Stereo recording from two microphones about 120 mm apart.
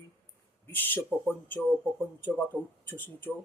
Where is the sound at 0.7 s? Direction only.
15° left (ahead or behind).